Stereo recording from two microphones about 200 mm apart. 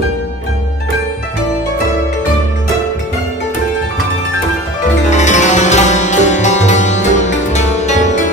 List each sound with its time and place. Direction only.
5.1 s music: 35° left (ahead or behind)